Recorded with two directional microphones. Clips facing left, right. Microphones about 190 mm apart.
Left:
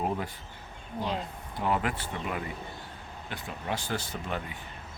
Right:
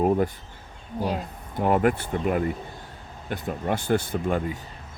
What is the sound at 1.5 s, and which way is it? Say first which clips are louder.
Speech: right 8 dB; 50° right (ahead or behind).